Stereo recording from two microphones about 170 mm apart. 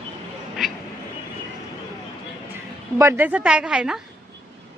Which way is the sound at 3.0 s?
10° right (ahead or behind).